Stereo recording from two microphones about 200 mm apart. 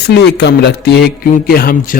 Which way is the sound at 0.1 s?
60° left (ahead or behind).